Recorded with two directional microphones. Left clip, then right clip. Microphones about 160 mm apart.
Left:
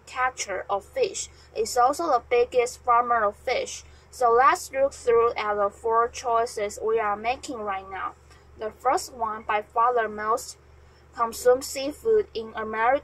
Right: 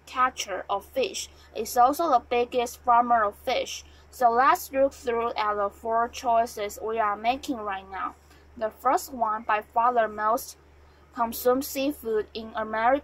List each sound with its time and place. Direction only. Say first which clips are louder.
0.1 s a woman's voice: right 1 dB; 35° right (ahead or behind)